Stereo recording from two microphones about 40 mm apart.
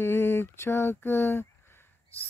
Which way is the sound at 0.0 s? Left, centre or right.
Left.